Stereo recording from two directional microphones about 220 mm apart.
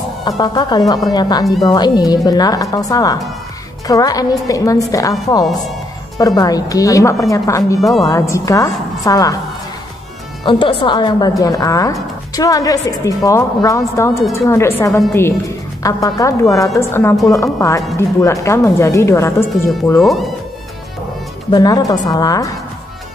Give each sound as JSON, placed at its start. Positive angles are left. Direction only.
{"t": 0.4, "sound": "a woman's voice", "side_deg": 20}
{"t": 6.1, "sound": "a woman's voice", "side_deg": 15}
{"t": 7.8, "sound": "speech", "side_deg": 0}
{"t": 8.1, "sound": "a woman's voice", "side_deg": 15}
{"t": 10.4, "sound": "a woman's voice", "side_deg": 25}
{"t": 20.0, "sound": "speech", "side_deg": 0}
{"t": 21.5, "sound": "a woman's voice", "side_deg": 15}